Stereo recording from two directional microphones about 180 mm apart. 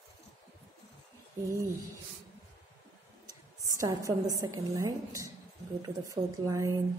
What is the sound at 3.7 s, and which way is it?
A woman's voice, 20° right (ahead or behind).